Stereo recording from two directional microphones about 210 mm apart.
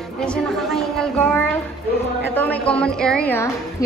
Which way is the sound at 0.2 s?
Centre (ahead or behind).